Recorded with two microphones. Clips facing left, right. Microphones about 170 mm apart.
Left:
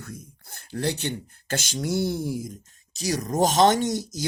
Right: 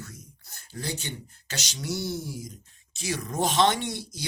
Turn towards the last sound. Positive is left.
turn(degrees=45)  # may be behind; listen again after turning